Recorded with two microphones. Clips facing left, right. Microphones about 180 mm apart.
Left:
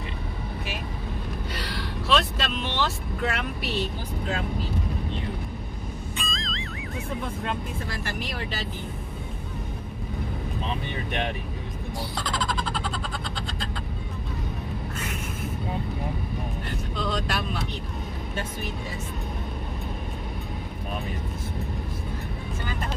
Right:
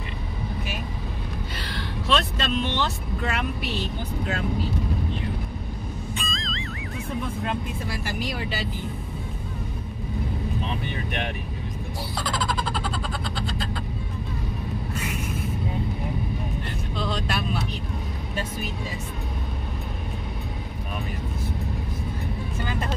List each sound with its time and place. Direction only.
1.6 s vehicle: 5° left (ahead or behind)
6.1 s music: centre (ahead or behind)
12.2 s a sound: 5° right (ahead or behind)
16.9 s vehicle: centre (ahead or behind)